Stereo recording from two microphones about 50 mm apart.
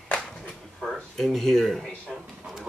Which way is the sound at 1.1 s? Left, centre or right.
Centre.